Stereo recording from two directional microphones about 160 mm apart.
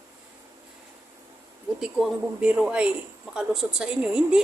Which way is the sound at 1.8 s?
5° right (ahead or behind).